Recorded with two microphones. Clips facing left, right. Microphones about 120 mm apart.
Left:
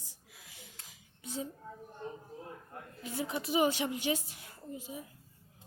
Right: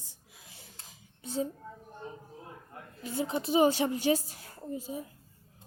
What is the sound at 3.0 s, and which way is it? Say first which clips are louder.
A woman's voice: right 4 dB; 30° right (ahead or behind).